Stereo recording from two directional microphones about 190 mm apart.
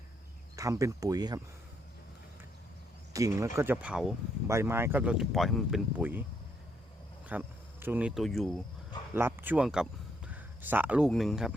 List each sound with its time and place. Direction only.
0.5 s speech: 15° right (ahead or behind)
3.1 s speech: 15° right (ahead or behind)
7.3 s speech: 10° right (ahead or behind)
9.1 s speech: 10° right (ahead or behind)